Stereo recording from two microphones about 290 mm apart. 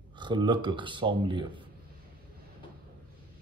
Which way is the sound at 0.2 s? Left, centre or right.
Centre.